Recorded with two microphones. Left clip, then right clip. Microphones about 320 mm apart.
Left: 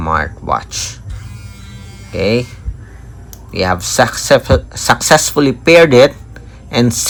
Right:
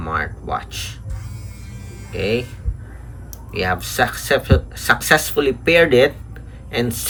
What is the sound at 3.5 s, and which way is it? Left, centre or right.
Speech, centre.